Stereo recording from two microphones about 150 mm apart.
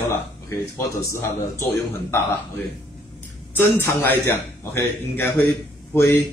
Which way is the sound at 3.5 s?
15° left (ahead or behind).